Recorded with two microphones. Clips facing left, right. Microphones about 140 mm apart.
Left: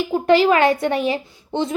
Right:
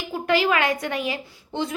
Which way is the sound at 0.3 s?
30° left (ahead or behind).